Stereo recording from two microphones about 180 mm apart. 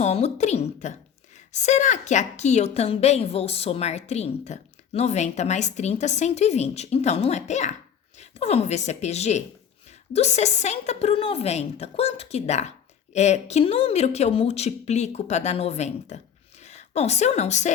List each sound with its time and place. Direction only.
0.0 s a woman's voice: 40° left (ahead or behind)